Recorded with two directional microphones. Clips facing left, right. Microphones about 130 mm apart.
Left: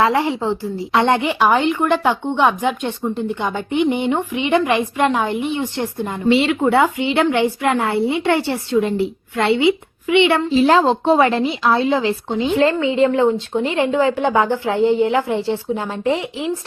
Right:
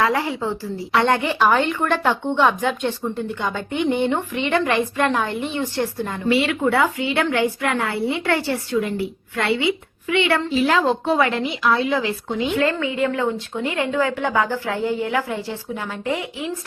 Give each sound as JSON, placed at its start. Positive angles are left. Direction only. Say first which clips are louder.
{"t": 0.0, "sound": "a woman's voice", "louder": "left 4 dB", "side_deg": 25}